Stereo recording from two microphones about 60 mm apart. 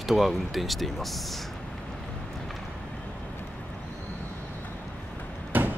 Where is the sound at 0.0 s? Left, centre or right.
Centre.